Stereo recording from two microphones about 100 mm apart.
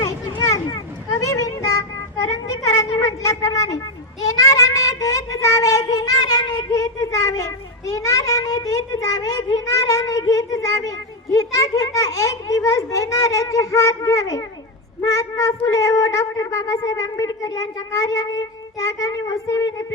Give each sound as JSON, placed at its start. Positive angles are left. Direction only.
{"t": 0.0, "sound": "children playing", "side_deg": 35}
{"t": 1.2, "sound": "child singing", "side_deg": 35}
{"t": 4.2, "sound": "speech", "side_deg": 35}